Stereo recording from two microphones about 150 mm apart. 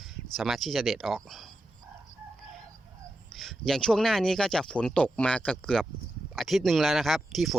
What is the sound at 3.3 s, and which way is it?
Speech, centre (ahead or behind).